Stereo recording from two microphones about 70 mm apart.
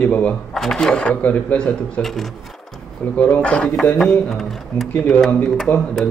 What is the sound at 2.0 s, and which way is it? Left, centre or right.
Speech, centre.